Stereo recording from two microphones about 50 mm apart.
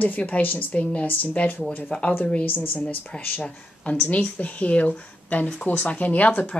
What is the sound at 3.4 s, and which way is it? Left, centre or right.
A woman's voice, left.